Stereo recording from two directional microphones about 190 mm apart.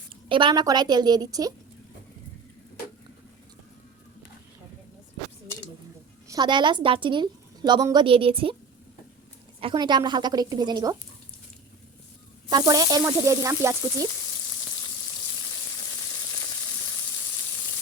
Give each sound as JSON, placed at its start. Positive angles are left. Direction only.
{"t": 0.3, "sound": "a woman's voice", "side_deg": -25}
{"t": 6.2, "sound": "a woman's voice", "side_deg": -20}
{"t": 9.6, "sound": "a woman's voice", "side_deg": -25}
{"t": 12.5, "sound": "speech", "side_deg": -20}